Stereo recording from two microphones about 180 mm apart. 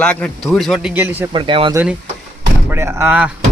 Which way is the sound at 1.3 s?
25° right (ahead or behind).